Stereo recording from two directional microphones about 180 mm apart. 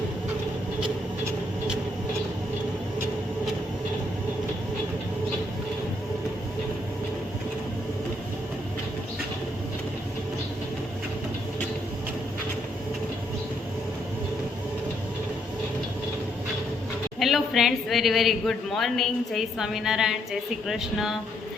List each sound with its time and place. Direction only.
17.2 s a woman's voice: centre (ahead or behind)